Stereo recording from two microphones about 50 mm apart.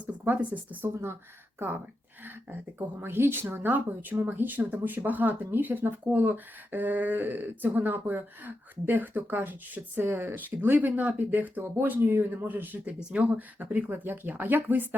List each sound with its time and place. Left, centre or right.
0.0 s speech: right
1.5 s speech: right
13.0 s speech: centre
13.3 s speech: right